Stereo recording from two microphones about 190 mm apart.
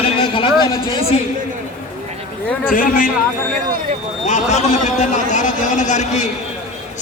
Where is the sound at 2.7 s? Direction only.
45° left (ahead or behind).